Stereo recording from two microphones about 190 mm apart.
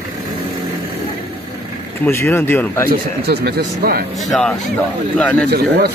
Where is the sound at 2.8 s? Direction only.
55° right (ahead or behind).